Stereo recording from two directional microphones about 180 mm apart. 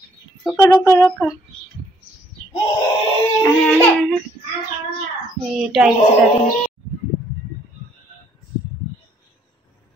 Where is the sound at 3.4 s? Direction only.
5° left (ahead or behind).